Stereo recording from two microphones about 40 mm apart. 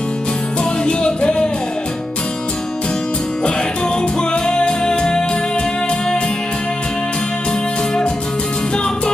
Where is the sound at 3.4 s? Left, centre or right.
Left.